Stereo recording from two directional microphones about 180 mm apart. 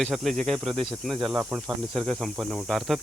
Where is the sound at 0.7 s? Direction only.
30° right (ahead or behind).